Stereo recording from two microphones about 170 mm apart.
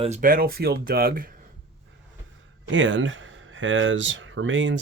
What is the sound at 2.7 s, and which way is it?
Speech, 90° right.